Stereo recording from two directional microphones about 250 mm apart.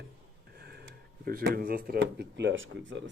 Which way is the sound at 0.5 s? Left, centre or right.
Right.